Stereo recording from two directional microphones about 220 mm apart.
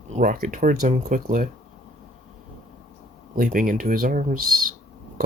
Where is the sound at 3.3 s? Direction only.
40° right (ahead or behind).